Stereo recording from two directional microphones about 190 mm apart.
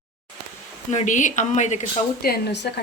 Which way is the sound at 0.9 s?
40° left (ahead or behind).